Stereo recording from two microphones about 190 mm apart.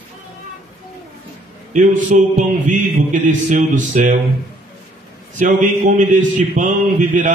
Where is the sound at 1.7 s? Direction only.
40° right (ahead or behind).